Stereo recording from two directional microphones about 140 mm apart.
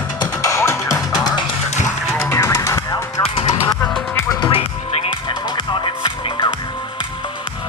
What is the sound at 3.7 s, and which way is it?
Music, 25° left (ahead or behind).